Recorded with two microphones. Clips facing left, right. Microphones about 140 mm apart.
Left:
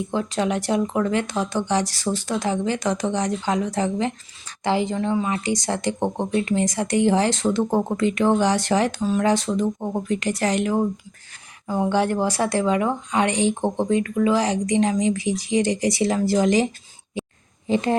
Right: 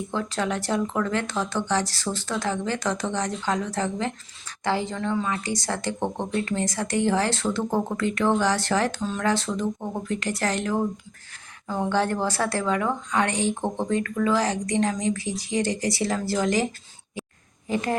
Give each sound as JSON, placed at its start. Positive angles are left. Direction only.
{"t": 0.1, "sound": "speech", "side_deg": 15}
{"t": 17.2, "sound": "a sound", "side_deg": 20}
{"t": 17.7, "sound": "a woman's voice", "side_deg": 25}